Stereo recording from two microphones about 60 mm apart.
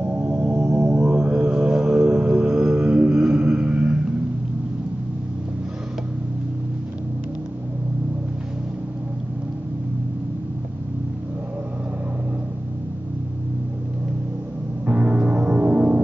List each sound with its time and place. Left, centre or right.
0.0 s singing bowl: right
0.4 s music: right
14.9 s music: right